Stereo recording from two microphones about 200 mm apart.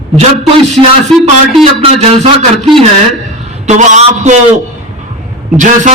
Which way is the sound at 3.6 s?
35° right (ahead or behind).